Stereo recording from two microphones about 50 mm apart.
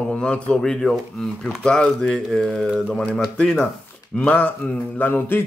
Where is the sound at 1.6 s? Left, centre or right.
Centre.